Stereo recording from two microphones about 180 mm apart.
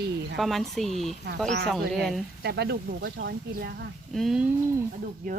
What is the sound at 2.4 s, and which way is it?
Speech, 65° right (ahead or behind).